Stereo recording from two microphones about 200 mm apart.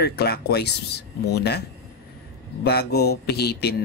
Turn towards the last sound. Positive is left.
turn(degrees=55)  # may be behind; listen again after turning